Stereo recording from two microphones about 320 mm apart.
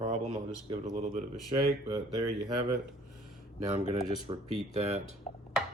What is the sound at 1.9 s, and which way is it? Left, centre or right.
Speech, centre.